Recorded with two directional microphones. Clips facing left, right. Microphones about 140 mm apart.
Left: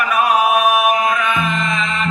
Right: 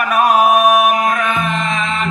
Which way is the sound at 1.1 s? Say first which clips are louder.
Right 1 dB; 45° right (ahead or behind).